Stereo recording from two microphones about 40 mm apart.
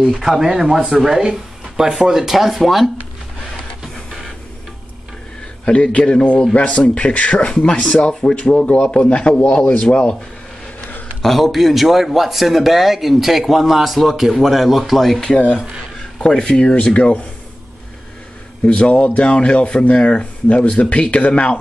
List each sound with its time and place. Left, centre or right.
0.1 s speech: centre
3.8 s music: centre
5.7 s speech: left
6.8 s speech: left
7.6 s speech: left
8.4 s speech: left
11.2 s speech: centre
16.0 s speech: centre
16.8 s speech: left
18.7 s speech: left